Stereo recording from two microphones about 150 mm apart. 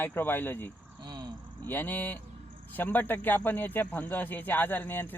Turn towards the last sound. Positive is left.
turn(degrees=15)  # may be behind; listen again after turning